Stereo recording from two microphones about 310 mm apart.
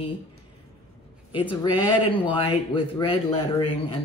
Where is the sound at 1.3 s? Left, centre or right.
Centre.